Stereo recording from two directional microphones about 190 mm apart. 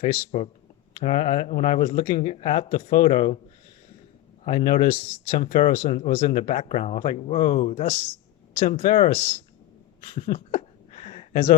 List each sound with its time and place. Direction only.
0.0 s speech: 35° left (ahead or behind)
4.4 s a man's voice: 45° left (ahead or behind)
4.9 s speech: 35° left (ahead or behind)
9.0 s speech: 35° left (ahead or behind)
10.2 s a sound: 35° left (ahead or behind)